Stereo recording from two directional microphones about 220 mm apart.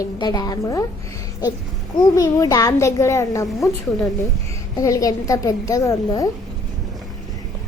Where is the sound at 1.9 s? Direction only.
15° left (ahead or behind).